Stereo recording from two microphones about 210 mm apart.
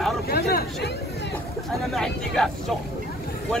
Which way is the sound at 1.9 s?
Centre (ahead or behind).